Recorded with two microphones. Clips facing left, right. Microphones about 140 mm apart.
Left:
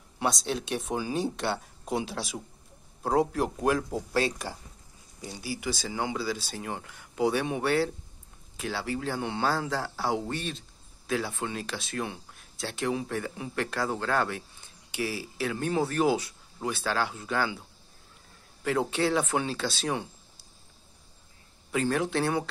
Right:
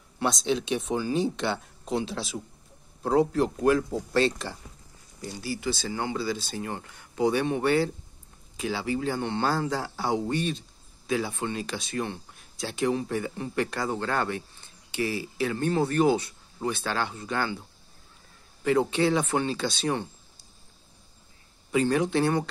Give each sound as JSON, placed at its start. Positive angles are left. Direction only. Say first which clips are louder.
{"t": 0.2, "sound": "speech", "louder": "right 3 dB", "side_deg": 5}
{"t": 21.7, "sound": "speech", "louder": "right 3 dB", "side_deg": 0}